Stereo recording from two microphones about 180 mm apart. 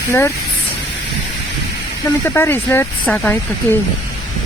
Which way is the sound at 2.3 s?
10° left (ahead or behind).